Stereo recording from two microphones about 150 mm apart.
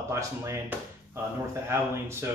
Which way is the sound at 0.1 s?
20° right (ahead or behind).